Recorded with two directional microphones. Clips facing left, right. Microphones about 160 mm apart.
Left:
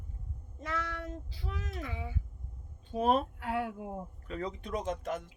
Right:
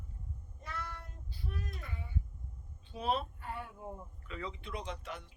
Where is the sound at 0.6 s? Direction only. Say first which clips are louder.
Left 8 dB; 90° left.